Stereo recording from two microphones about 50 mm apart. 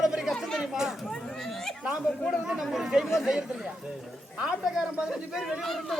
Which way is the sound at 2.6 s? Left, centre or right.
Centre.